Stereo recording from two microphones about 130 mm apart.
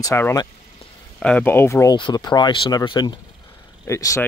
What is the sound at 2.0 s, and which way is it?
Speech, 35° left (ahead or behind).